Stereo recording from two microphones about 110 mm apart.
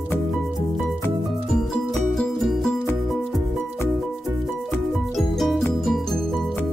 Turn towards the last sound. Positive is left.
turn(degrees=0)  # may be behind; listen again after turning